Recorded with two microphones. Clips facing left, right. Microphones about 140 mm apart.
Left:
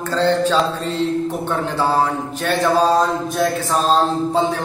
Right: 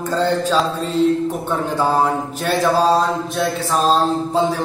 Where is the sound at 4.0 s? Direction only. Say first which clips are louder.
Even; 10° right (ahead or behind).